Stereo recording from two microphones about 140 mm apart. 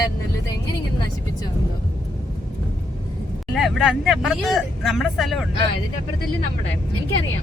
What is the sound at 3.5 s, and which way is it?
Speech, centre (ahead or behind).